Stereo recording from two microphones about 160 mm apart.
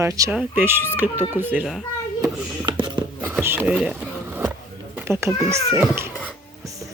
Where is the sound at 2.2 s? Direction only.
30° right (ahead or behind).